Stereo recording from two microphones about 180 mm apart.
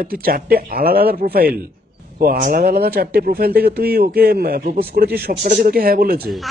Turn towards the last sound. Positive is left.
turn(degrees=0)  # may be behind; listen again after turning